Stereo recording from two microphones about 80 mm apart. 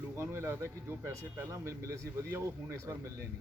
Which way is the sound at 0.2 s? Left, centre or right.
Right.